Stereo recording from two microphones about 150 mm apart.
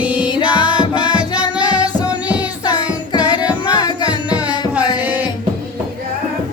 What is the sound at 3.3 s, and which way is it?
Music, 30° left (ahead or behind).